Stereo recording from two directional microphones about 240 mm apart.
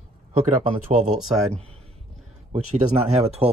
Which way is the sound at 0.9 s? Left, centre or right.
Right.